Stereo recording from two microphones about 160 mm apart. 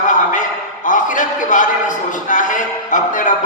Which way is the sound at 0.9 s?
55° left (ahead or behind).